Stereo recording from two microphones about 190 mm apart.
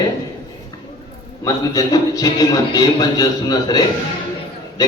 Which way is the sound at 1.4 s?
20° left (ahead or behind).